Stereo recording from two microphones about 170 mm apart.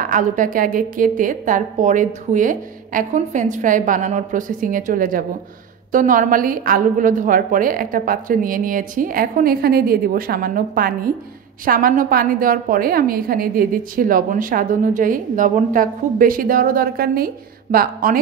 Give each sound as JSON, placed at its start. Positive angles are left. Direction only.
{"t": 0.0, "sound": "a woman's voice", "side_deg": -50}